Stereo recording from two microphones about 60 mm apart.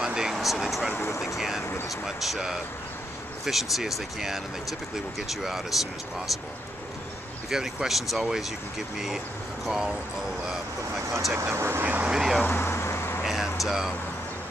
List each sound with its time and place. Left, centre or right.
0.0 s a sound: centre
2.0 s speech: centre
7.4 s speech: centre
11.3 s speech: right
11.8 s vehicle: right
12.1 s vehicle: centre
12.4 s vehicle: left
13.2 s vehicle: centre